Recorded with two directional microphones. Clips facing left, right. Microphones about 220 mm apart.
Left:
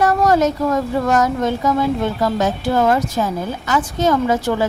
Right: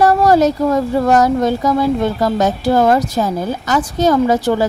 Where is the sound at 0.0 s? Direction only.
35° right (ahead or behind).